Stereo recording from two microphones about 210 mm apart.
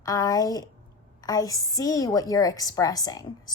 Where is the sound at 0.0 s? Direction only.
15° left (ahead or behind).